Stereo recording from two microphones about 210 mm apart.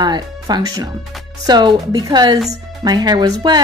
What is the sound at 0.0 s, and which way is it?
Speech, 20° right (ahead or behind).